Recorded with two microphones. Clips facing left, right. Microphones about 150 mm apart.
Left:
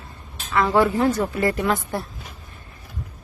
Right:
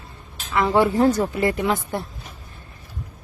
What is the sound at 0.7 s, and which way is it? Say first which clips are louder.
Speech: right 2 dB; 25° right (ahead or behind).